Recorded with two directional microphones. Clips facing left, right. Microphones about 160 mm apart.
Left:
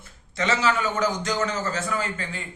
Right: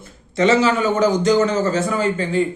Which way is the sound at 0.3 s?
25° right (ahead or behind).